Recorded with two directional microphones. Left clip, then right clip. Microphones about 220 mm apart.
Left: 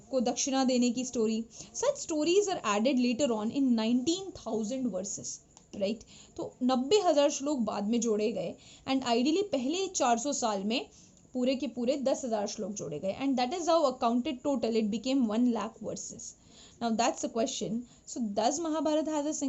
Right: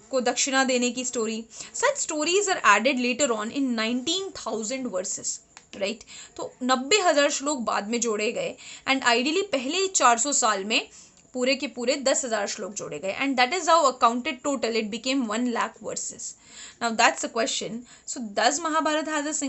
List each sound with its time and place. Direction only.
0.1 s a woman's voice: 5° right (ahead or behind)